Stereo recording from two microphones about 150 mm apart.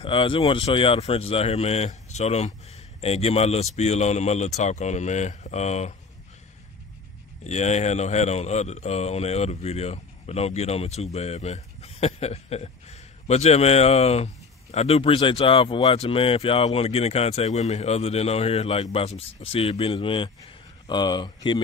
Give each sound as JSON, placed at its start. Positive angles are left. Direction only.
{"t": 0.0, "sound": "speech", "side_deg": 35}
{"t": 7.4, "sound": "speech", "side_deg": 50}